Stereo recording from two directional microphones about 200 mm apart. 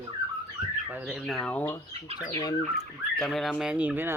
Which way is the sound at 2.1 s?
20° left (ahead or behind).